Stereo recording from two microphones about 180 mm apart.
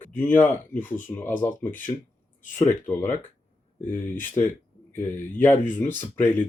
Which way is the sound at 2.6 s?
10° left (ahead or behind).